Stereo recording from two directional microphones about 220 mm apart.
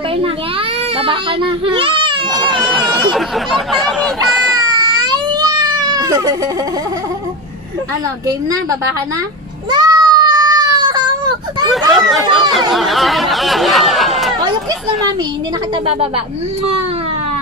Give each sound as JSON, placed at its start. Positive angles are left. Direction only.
{"t": 0.9, "sound": "speech", "side_deg": -25}
{"t": 2.3, "sound": "speech", "side_deg": 0}
{"t": 4.6, "sound": "baby cry", "side_deg": -20}
{"t": 8.3, "sound": "a woman's voice", "side_deg": -15}
{"t": 9.7, "sound": "baby cry", "side_deg": -20}
{"t": 11.9, "sound": "speech", "side_deg": 0}